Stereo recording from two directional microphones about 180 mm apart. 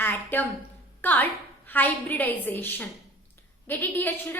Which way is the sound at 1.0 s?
10° left (ahead or behind).